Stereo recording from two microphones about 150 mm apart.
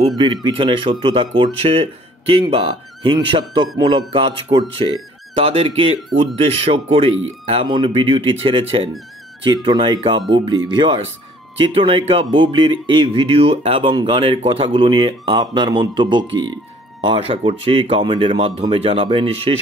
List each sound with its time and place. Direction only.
0.2 s speech: 35° right (ahead or behind)